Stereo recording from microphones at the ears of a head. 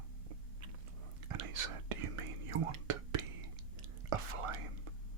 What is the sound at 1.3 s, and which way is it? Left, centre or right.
Whispering, right.